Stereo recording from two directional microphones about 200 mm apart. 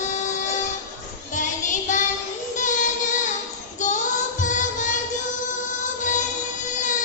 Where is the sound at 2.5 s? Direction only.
40° left (ahead or behind).